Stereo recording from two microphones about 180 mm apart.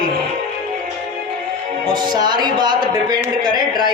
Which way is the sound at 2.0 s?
25° right (ahead or behind).